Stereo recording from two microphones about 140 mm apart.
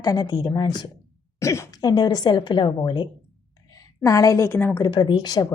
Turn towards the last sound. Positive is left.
turn(degrees=30)  # may be behind; listen again after turning